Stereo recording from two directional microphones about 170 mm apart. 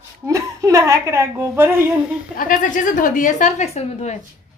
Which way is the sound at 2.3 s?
50° left (ahead or behind).